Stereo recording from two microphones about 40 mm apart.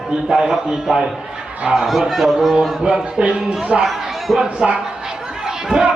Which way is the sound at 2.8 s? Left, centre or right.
Right.